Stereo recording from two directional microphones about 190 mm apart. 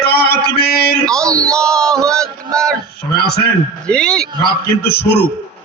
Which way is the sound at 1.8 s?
5° left (ahead or behind).